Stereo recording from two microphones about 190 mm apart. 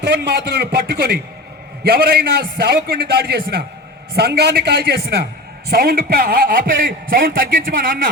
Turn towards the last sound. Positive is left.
turn(degrees=-50)  # may be behind; listen again after turning